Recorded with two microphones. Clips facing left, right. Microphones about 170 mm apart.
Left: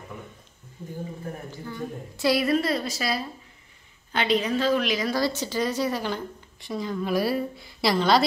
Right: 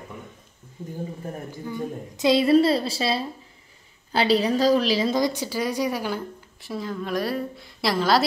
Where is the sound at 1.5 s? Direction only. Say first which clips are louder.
Right 3 dB; 15° right (ahead or behind).